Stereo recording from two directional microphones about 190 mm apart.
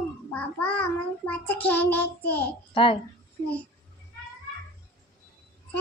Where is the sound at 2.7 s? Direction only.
30° left (ahead or behind).